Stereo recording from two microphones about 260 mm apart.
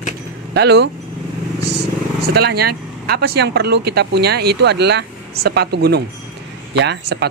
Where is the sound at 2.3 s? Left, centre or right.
Right.